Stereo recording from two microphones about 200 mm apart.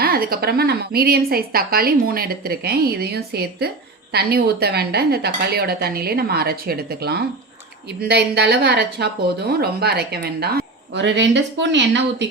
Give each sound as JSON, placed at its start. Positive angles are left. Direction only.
{"t": 0.0, "sound": "a woman's voice", "side_deg": -50}